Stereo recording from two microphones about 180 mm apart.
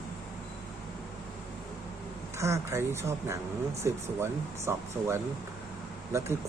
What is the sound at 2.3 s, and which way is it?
Speech, 15° right (ahead or behind).